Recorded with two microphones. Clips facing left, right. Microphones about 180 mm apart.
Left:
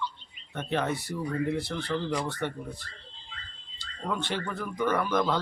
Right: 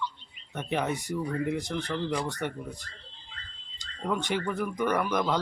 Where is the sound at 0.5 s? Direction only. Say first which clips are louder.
Even; 15° right (ahead or behind).